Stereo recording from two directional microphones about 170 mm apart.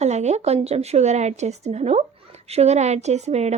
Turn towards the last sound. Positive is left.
turn(degrees=-40)  # may be behind; listen again after turning